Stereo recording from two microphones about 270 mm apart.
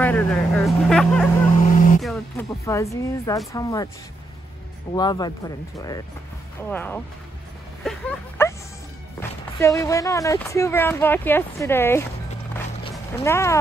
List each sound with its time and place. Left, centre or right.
0.0 s speech: centre
1.6 s vehicle: left
2.0 s speech: centre
2.6 s speech: centre
4.9 s speech: centre
6.6 s speech: centre
7.8 s a sound: centre
9.2 s speech: centre
13.2 s speech: centre